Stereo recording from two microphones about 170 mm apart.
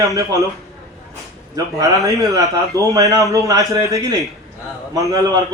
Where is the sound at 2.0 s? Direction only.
20° right (ahead or behind).